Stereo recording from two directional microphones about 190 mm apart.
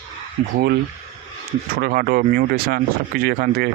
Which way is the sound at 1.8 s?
50° right (ahead or behind).